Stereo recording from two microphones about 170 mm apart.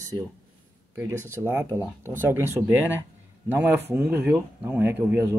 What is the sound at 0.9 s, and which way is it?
Speech, 15° right (ahead or behind).